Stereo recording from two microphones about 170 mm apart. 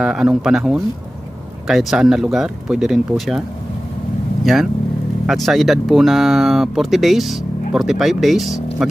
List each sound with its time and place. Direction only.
0.0 s speech: 5° right (ahead or behind)
5.2 s speech: centre (ahead or behind)